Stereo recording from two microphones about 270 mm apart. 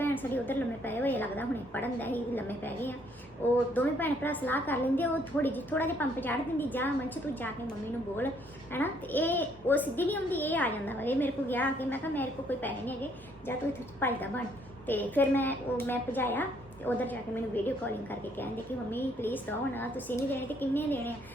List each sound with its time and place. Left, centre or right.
0.0 s a woman's voice: centre
8.7 s a woman's voice: centre